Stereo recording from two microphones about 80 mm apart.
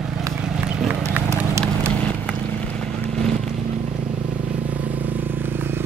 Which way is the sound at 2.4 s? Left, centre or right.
Centre.